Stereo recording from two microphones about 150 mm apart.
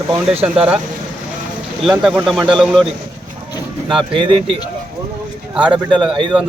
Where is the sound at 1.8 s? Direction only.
5° right (ahead or behind).